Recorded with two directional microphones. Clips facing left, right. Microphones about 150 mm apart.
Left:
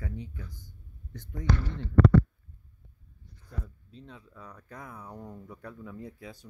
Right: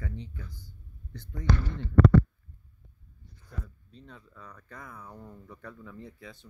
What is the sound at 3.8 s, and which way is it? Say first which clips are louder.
Speech: left 2 dB; centre (ahead or behind).